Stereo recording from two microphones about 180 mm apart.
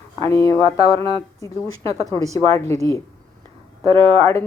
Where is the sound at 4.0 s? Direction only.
15° left (ahead or behind).